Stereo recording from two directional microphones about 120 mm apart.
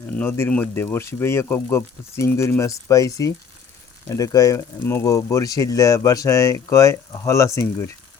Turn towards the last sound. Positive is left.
turn(degrees=25)  # may be behind; listen again after turning